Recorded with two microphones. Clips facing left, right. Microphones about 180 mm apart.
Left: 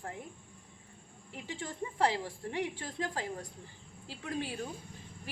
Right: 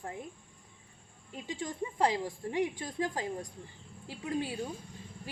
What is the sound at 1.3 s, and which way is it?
A woman's voice, 15° right (ahead or behind).